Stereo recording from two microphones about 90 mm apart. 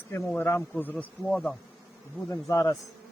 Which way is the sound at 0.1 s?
30° left (ahead or behind).